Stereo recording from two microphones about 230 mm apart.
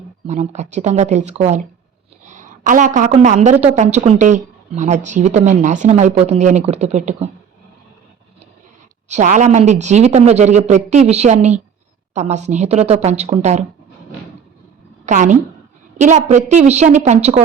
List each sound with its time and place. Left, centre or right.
0.3 s a woman's voice: right
9.0 s a woman's voice: right
15.0 s a woman's voice: right